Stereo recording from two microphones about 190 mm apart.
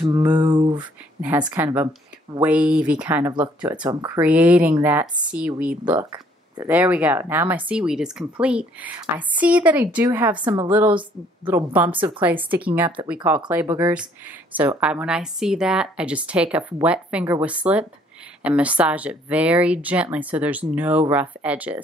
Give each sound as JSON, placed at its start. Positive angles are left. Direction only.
{"t": 0.4, "sound": "speech", "side_deg": -20}
{"t": 1.5, "sound": "speech", "side_deg": -10}
{"t": 3.7, "sound": "speech", "side_deg": -20}
{"t": 4.2, "sound": "speech", "side_deg": -5}
{"t": 10.4, "sound": "speech", "side_deg": -25}
{"t": 11.4, "sound": "speech", "side_deg": -10}
{"t": 13.7, "sound": "speech", "side_deg": -20}
{"t": 14.6, "sound": "a woman's voice", "side_deg": -5}